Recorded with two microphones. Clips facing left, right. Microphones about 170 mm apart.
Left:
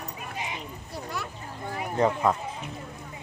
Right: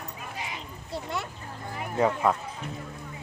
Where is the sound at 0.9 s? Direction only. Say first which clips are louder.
Right 3 dB; 25° right (ahead or behind).